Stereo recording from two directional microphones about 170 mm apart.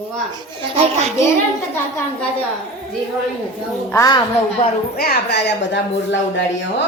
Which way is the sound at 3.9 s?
20° left (ahead or behind).